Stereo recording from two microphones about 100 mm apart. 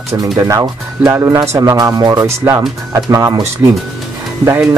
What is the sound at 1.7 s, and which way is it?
Speech, 40° right (ahead or behind).